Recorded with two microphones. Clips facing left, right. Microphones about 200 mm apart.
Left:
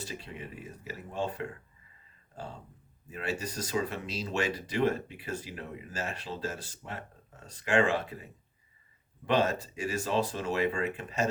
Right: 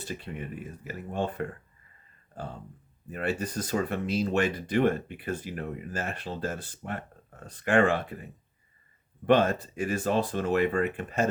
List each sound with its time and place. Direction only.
0.0 s speech: 55° right (ahead or behind)
3.1 s speech: 55° right (ahead or behind)